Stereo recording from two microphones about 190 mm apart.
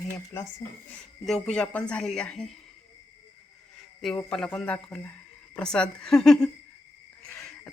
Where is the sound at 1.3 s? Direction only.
5° left (ahead or behind).